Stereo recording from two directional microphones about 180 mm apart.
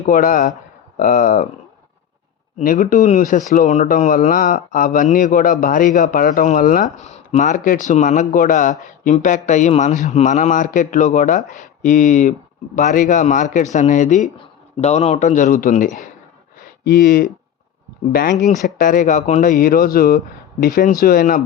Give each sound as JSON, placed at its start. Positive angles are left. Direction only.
{"t": 0.0, "sound": "speech", "side_deg": 45}
{"t": 2.6, "sound": "speech", "side_deg": 45}
{"t": 16.6, "sound": "a sound", "side_deg": 55}
{"t": 18.1, "sound": "speech", "side_deg": 55}